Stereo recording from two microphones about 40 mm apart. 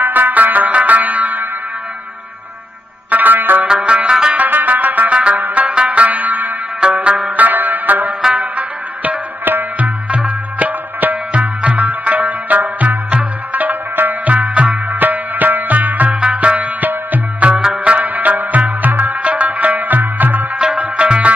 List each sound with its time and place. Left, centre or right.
0.0 s music: right
3.1 s music: right
3.6 s music: right
4.3 s music: right
5.5 s music: right
6.8 s music: right
16.2 s music: right
17.6 s music: centre
17.9 s music: right
20.5 s music: right